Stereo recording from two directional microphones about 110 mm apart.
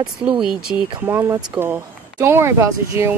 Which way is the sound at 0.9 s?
20° right (ahead or behind).